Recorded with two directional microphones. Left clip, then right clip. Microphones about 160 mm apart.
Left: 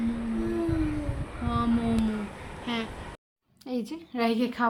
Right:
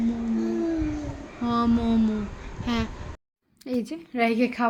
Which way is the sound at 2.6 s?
55° right (ahead or behind).